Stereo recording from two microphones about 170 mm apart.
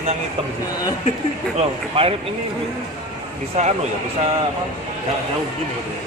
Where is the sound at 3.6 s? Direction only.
45° right (ahead or behind).